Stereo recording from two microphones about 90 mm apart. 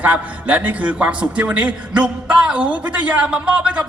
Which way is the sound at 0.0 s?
15° right (ahead or behind).